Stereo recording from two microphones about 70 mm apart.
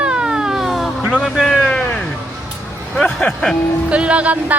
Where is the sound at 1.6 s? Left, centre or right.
Centre.